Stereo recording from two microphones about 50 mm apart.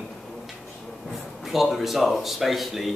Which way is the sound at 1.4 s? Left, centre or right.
Centre.